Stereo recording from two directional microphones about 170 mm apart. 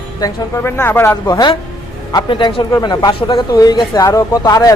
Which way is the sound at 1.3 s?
20° left (ahead or behind).